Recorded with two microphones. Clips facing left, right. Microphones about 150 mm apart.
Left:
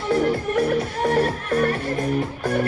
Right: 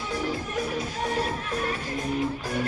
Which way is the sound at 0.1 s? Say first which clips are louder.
Left 10 dB; 60° left (ahead or behind).